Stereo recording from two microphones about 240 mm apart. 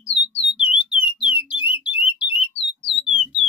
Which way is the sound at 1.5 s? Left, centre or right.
Left.